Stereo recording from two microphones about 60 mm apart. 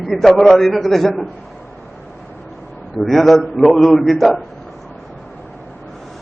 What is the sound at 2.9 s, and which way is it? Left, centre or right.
A man's voice, centre.